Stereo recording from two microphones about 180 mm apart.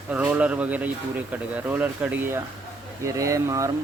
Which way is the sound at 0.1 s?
10° right (ahead or behind).